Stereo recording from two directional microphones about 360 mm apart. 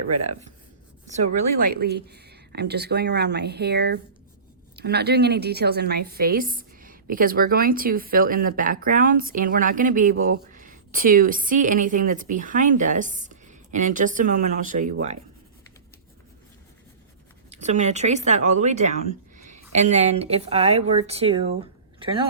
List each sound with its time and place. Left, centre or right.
1.7 s a woman's voice: right
17.5 s a woman's voice: centre